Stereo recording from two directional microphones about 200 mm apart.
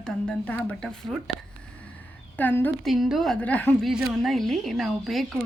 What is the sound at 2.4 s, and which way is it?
A woman's voice, 10° left (ahead or behind).